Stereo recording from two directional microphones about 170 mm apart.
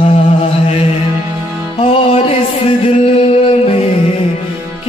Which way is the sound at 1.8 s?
35° left (ahead or behind).